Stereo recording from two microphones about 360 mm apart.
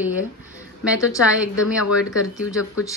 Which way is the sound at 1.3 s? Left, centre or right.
Centre.